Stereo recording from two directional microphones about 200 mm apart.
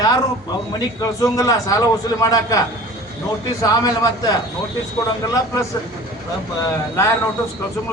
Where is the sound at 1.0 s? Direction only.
15° left (ahead or behind).